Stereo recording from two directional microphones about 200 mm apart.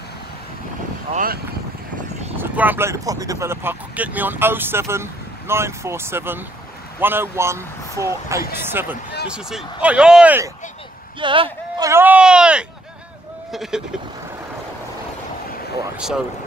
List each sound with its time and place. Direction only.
1.1 s speech: 45° right (ahead or behind)
2.3 s speech: 10° right (ahead or behind)
9.3 s speech: 5° right (ahead or behind)
11.1 s speech: 25° right (ahead or behind)
11.9 s speech: 10° right (ahead or behind)